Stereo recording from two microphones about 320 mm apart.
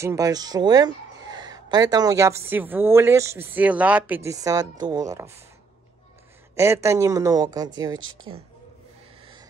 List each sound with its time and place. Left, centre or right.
0.0 s speech: centre
6.5 s speech: centre
8.0 s speech: right